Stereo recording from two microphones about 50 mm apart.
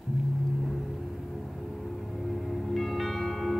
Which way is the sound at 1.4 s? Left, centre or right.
Centre.